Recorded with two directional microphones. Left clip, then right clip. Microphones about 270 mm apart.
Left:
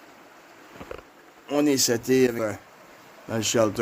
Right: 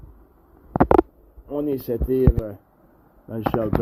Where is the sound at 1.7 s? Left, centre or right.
Centre.